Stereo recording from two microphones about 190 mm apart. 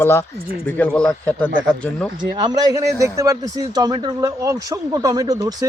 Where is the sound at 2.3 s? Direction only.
20° right (ahead or behind).